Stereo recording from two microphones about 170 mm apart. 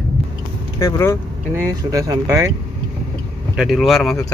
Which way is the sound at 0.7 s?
15° left (ahead or behind).